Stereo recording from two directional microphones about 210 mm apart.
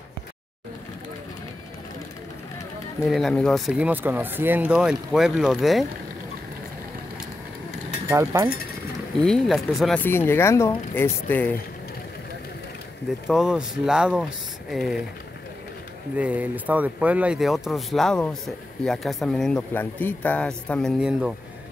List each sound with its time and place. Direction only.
3.1 s speech: centre (ahead or behind)
8.1 s speech: 15° right (ahead or behind)
9.2 s speech: centre (ahead or behind)
13.3 s speech: 5° right (ahead or behind)
16.2 s speech: 5° right (ahead or behind)